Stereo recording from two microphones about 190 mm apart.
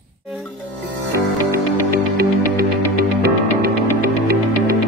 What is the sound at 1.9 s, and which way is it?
Music, 50° right (ahead or behind).